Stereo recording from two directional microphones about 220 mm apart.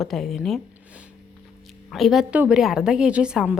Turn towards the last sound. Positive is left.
turn(degrees=-5)  # may be behind; listen again after turning